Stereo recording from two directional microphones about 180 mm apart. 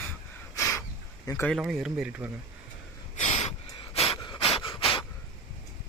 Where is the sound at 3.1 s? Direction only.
40° left (ahead or behind).